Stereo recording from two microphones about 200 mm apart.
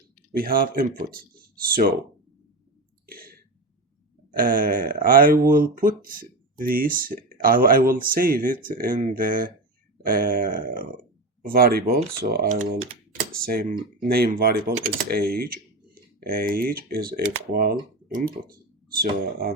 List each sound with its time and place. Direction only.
0.3 s speech: 45° right (ahead or behind)
3.1 s clicking: 45° right (ahead or behind)
4.3 s speech: 45° right (ahead or behind)